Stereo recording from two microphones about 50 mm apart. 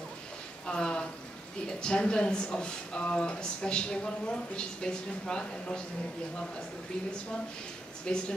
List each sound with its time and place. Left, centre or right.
0.7 s speech: centre
8.1 s speech: centre